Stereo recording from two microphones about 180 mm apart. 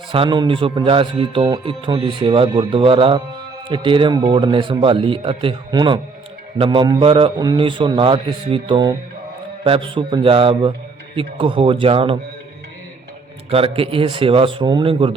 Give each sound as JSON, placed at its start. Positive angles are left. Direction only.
{"t": 0.1, "sound": "speech", "side_deg": -25}
{"t": 13.5, "sound": "speech", "side_deg": -30}